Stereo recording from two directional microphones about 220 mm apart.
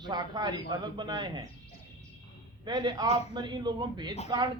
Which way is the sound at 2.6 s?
20° right (ahead or behind).